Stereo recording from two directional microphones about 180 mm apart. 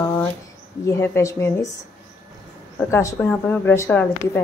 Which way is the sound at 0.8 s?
15° left (ahead or behind).